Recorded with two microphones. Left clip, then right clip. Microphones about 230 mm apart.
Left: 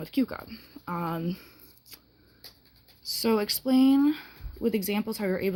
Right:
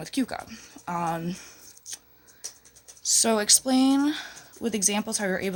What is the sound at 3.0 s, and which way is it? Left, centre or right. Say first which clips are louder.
Speech: right 4 dB; centre.